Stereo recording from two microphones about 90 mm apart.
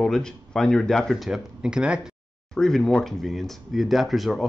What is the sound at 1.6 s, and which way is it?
Speech, 10° right (ahead or behind).